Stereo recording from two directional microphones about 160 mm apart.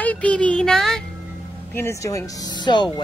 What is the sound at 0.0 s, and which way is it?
Music, 10° left (ahead or behind).